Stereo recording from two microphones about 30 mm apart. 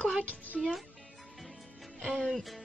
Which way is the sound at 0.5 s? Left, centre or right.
Centre.